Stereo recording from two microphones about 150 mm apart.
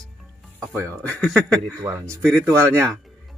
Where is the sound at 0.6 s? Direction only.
20° right (ahead or behind).